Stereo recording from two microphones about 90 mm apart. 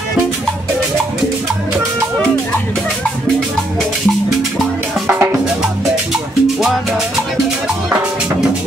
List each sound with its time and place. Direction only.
5.0 s music: 25° right (ahead or behind)